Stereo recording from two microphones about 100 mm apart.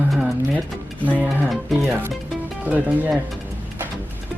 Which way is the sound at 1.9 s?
20° right (ahead or behind).